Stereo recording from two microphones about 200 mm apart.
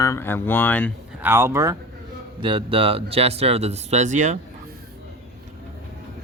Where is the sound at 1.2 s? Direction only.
15° right (ahead or behind); by 4.4 s 40° right (ahead or behind).